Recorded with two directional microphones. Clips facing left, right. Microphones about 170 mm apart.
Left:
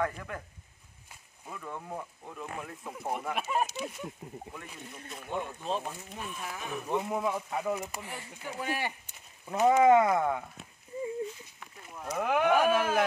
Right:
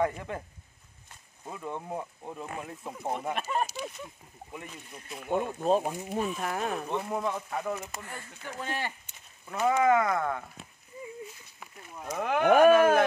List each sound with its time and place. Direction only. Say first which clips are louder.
0.0 s speech: right 4 dB; 25° right (ahead or behind)
1.5 s speech: right 4 dB; 25° right (ahead or behind)
2.2 s speech: right 2 dB; 35° right (ahead or behind)
3.3 s speech: even; 5° left (ahead or behind)
5.3 s speech: right 8 dB; 45° right (ahead or behind)
5.8 s speech: right 7 dB; 15° right (ahead or behind)
6.0 s speech: right 9 dB; 50° right (ahead or behind)
6.9 s speech: left 1 dB; 5° left (ahead or behind)
12.2 s speech: even; 5° left (ahead or behind)
12.4 s speech: right 9 dB; 55° right (ahead or behind)